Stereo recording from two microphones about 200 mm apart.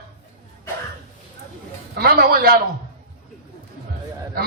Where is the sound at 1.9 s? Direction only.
50° right (ahead or behind).